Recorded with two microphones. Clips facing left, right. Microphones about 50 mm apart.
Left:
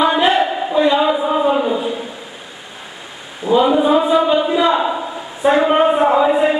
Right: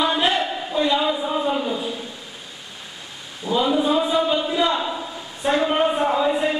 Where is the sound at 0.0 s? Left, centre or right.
Centre.